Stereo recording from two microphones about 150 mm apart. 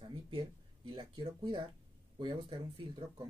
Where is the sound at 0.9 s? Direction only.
30° right (ahead or behind).